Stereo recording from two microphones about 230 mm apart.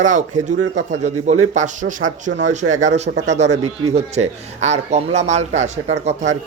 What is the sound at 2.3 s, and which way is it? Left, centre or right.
Speech, right.